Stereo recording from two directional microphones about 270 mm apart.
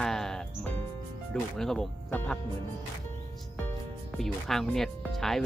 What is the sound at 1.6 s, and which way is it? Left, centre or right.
Speech, centre.